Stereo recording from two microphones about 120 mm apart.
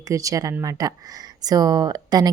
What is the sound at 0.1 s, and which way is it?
A woman's voice, 30° right (ahead or behind).